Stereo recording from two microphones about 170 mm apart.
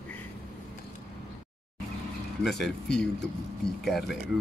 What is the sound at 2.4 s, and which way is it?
Speech, centre (ahead or behind).